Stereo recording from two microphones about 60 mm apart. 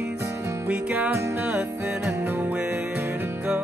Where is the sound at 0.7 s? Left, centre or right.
Right.